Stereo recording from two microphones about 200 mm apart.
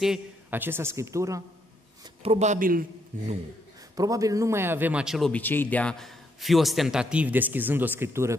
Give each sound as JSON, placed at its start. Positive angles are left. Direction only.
{"t": 0.0, "sound": "speech", "side_deg": -5}
{"t": 2.2, "sound": "speech", "side_deg": -35}
{"t": 3.9, "sound": "speech", "side_deg": -15}